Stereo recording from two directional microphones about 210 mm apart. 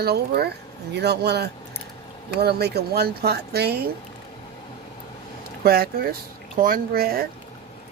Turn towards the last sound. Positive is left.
turn(degrees=-45)  # may be behind; listen again after turning